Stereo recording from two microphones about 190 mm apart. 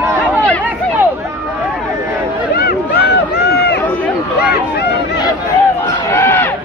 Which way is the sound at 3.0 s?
60° left (ahead or behind).